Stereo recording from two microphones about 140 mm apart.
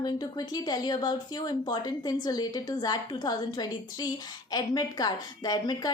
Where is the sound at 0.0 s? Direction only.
30° left (ahead or behind).